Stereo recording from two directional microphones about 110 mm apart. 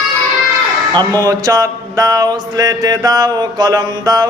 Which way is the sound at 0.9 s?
35° right (ahead or behind).